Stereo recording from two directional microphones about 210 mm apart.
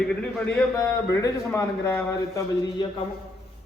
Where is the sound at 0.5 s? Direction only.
15° left (ahead or behind).